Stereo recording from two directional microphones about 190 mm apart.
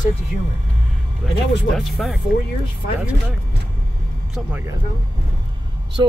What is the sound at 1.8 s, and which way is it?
Speech, centre (ahead or behind).